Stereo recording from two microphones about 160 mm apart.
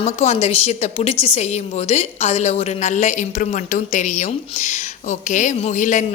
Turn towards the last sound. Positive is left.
turn(degrees=50)  # may be behind; listen again after turning